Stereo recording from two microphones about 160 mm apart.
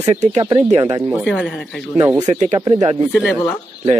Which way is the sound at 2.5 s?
25° right (ahead or behind).